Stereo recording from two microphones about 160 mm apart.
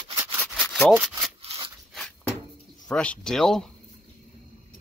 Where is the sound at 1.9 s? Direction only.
5° left (ahead or behind).